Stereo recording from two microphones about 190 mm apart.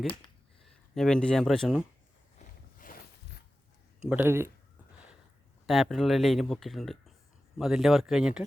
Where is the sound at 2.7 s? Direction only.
45° left (ahead or behind).